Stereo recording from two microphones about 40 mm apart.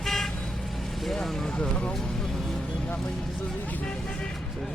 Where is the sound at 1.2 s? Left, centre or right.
Centre.